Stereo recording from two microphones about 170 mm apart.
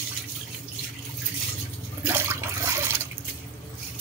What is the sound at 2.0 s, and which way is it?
Toilet flush, 15° right (ahead or behind).